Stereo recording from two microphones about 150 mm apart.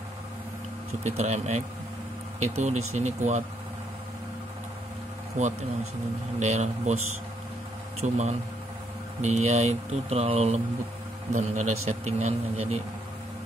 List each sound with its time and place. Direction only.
1.0 s a man's voice: 50° right (ahead or behind)
5.4 s a man's voice: 55° right (ahead or behind)
8.0 s a man's voice: 45° right (ahead or behind)